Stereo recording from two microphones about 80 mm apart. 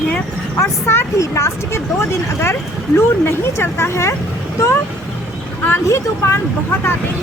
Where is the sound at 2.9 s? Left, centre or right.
Left.